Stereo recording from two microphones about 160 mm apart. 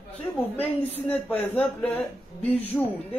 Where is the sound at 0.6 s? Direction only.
10° left (ahead or behind).